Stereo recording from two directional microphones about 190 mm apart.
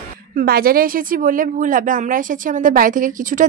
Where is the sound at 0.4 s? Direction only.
50° right (ahead or behind).